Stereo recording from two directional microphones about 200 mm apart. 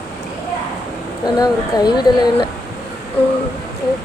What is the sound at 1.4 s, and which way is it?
Speech, 20° left (ahead or behind).